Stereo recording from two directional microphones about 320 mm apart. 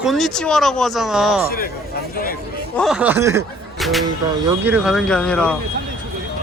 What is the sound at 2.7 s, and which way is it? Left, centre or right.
Speech, centre.